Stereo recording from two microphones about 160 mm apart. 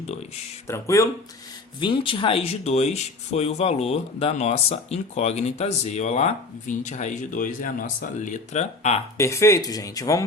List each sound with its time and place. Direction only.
0.7 s speech: 20° left (ahead or behind)
1.8 s speech: 30° left (ahead or behind)
9.1 s speech: 20° left (ahead or behind)